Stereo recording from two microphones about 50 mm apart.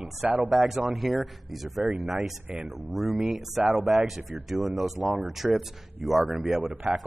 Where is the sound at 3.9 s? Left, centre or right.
Centre.